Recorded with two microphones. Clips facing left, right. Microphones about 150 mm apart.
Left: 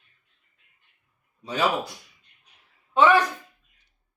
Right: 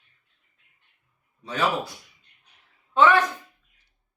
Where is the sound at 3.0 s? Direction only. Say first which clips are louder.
Even; 15° left (ahead or behind).